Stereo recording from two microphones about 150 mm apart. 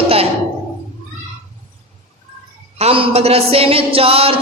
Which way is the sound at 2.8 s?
40° right (ahead or behind).